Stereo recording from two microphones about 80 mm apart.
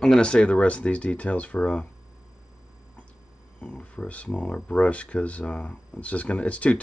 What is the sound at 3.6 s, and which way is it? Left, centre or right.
Speech, centre.